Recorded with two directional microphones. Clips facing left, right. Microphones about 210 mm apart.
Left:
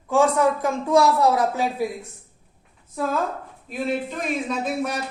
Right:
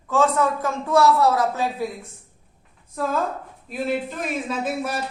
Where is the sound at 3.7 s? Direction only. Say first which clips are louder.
Even; centre (ahead or behind).